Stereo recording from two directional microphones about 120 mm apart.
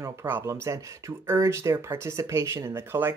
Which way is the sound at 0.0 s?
25° right (ahead or behind).